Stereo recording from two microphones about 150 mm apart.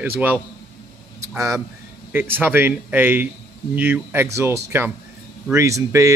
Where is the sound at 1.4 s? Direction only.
20° right (ahead or behind).